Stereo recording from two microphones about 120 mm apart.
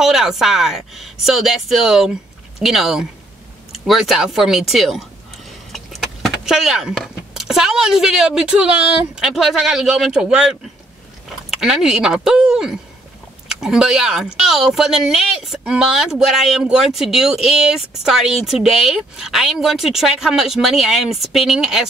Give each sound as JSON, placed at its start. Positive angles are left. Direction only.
{"t": 0.0, "sound": "speech", "side_deg": -5}